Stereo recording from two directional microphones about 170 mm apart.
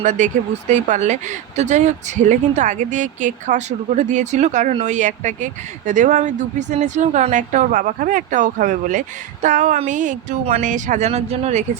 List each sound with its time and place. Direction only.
0.0 s speech: 45° right (ahead or behind)